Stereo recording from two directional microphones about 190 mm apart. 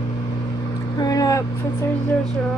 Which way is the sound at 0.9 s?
20° left (ahead or behind).